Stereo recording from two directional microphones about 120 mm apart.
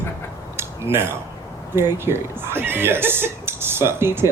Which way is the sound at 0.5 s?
20° right (ahead or behind).